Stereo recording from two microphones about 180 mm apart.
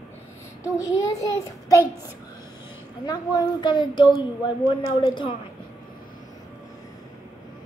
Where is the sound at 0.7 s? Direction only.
20° left (ahead or behind).